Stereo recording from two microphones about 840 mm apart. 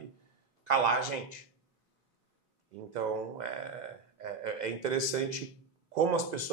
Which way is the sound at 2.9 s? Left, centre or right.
Right.